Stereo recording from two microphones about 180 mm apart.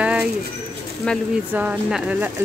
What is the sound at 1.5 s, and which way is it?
Speech, 10° right (ahead or behind).